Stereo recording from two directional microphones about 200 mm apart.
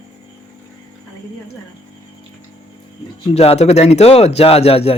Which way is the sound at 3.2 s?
30° left (ahead or behind).